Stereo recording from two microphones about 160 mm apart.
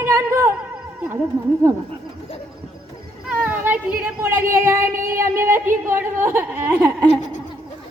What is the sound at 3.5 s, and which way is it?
Speech, 10° right (ahead or behind).